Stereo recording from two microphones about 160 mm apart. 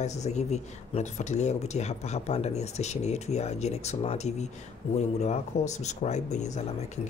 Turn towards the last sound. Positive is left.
turn(degrees=45)  # may be behind; listen again after turning